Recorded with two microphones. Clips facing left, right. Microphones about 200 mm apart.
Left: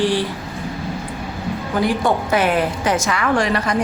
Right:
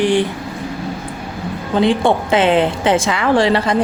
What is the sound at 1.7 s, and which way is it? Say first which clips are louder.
A woman's voice: right 5 dB; 25° right (ahead or behind).